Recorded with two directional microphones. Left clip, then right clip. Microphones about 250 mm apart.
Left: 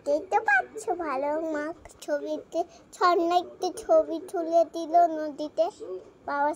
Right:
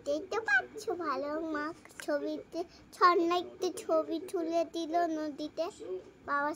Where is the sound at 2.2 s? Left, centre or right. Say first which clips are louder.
Left 7 dB; right.